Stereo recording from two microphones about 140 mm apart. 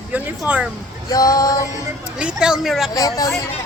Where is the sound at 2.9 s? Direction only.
25° left (ahead or behind).